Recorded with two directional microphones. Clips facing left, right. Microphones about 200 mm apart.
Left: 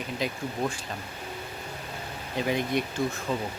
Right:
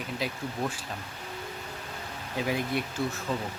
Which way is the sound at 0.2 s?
5° right (ahead or behind).